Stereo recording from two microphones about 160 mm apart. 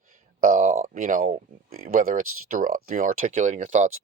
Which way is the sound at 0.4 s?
55° right (ahead or behind).